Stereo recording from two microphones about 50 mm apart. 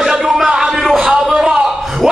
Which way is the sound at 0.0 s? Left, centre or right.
Centre.